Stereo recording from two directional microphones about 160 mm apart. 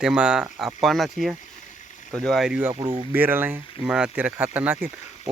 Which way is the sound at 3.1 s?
10° right (ahead or behind).